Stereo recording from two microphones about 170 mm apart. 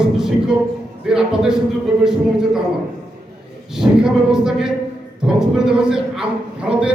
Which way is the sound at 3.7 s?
5° right (ahead or behind).